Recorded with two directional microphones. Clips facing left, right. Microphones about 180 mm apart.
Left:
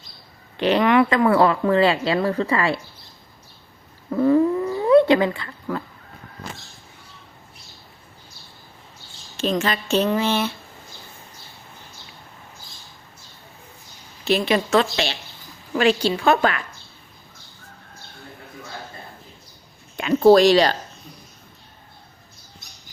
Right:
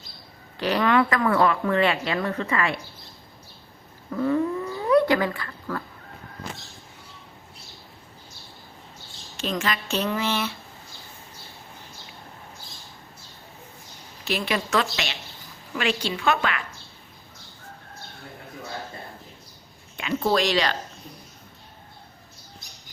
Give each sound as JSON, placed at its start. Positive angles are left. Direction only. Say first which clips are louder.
{"t": 0.5, "sound": "a woman's voice", "louder": "left 4 dB", "side_deg": 20}
{"t": 4.1, "sound": "speech", "louder": "left 6 dB", "side_deg": 30}
{"t": 9.4, "sound": "a woman's voice", "louder": "left 5 dB", "side_deg": 30}
{"t": 14.3, "sound": "a woman's voice", "louder": "left 7 dB", "side_deg": 25}
{"t": 20.0, "sound": "speech", "louder": "left 10 dB", "side_deg": 40}